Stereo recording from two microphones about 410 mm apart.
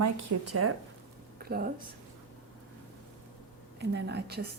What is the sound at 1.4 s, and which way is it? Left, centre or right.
Speech, right.